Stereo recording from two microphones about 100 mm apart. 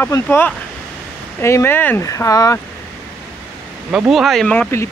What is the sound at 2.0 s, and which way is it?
Speech, 35° left (ahead or behind).